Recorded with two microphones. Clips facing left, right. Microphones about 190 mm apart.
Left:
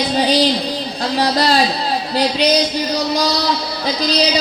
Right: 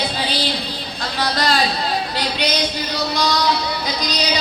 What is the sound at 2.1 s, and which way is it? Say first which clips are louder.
Music: left 7 dB; 35° left (ahead or behind).